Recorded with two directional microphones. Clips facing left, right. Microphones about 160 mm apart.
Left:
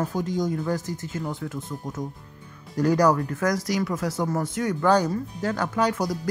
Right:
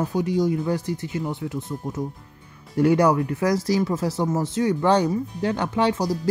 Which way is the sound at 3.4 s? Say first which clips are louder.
Right 3 dB; 25° right (ahead or behind).